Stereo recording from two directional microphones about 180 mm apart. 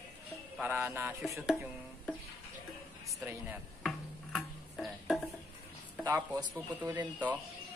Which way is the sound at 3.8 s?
Centre (ahead or behind).